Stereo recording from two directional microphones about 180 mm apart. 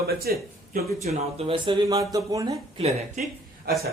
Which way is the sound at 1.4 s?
30° right (ahead or behind).